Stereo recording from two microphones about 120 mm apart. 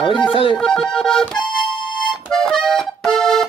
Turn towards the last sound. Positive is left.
turn(degrees=5)  # may be behind; listen again after turning